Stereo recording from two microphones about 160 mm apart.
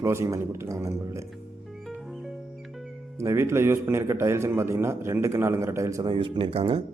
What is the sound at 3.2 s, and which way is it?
A man's voice, 15° right (ahead or behind).